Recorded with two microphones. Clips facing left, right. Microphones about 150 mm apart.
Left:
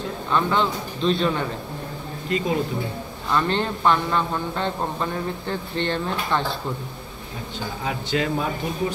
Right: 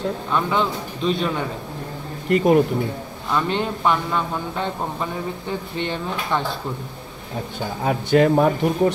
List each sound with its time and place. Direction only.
0.3 s a man's voice: 10° right (ahead or behind)
2.2 s speech: 60° right (ahead or behind)
3.3 s a man's voice: 10° right (ahead or behind)
7.8 s speech: 50° right (ahead or behind)